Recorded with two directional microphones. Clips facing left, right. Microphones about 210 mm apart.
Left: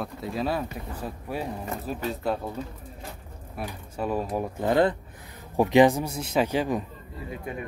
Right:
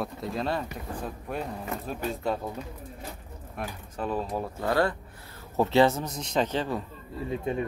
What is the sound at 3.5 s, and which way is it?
Speech, 10° left (ahead or behind).